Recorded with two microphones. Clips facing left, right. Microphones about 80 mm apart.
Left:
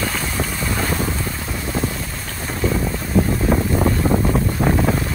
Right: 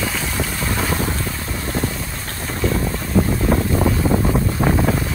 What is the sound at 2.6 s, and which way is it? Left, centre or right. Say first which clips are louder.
Boat: even; centre.